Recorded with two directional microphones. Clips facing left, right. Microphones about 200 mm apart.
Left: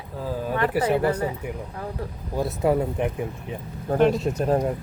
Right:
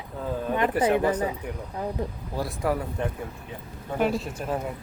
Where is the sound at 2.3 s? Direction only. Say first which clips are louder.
Left 6 dB; 25° left (ahead or behind).